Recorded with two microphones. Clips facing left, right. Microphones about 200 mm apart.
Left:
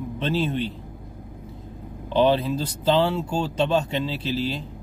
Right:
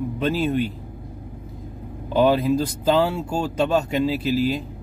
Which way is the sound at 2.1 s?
10° right (ahead or behind).